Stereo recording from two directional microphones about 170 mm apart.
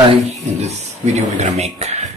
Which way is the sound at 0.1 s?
40° right (ahead or behind).